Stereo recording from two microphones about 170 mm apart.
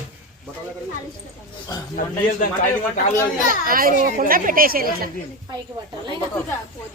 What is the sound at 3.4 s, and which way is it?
A child's voice, 55° right (ahead or behind).